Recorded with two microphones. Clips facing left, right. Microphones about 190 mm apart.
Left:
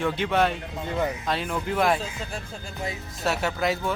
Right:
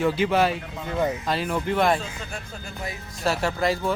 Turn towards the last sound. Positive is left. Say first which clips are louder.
# right 2 dB
turn(degrees=0)  # may be behind; listen again after turning